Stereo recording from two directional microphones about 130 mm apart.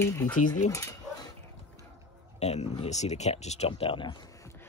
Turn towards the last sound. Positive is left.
turn(degrees=40)  # may be behind; listen again after turning